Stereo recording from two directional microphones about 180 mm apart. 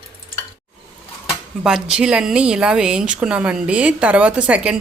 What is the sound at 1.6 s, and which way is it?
Speech, 5° right (ahead or behind).